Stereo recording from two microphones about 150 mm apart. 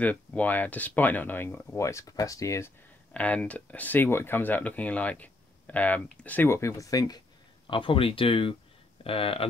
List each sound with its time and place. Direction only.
0.0 s speech: 10° left (ahead or behind)
3.1 s speech: 10° left (ahead or behind)
7.6 s speech: 35° left (ahead or behind)